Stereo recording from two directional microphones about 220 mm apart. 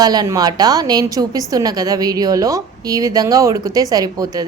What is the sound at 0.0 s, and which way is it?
A woman's voice, 15° right (ahead or behind).